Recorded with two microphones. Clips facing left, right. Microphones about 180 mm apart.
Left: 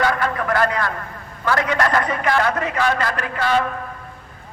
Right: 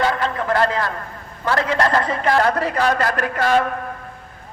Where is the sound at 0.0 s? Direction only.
25° right (ahead or behind); by 3.7 s 45° right (ahead or behind).